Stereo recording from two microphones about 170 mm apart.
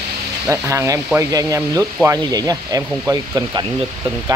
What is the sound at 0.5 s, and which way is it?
Speech, 15° right (ahead or behind).